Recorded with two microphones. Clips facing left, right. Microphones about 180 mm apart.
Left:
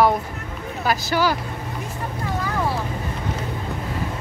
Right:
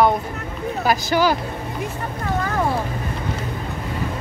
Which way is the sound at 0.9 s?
15° right (ahead or behind).